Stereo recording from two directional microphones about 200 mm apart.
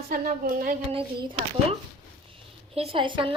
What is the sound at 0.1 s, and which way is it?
Speech, 45° right (ahead or behind).